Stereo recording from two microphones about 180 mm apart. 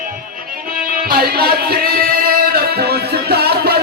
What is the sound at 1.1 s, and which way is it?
Music, 60° right (ahead or behind).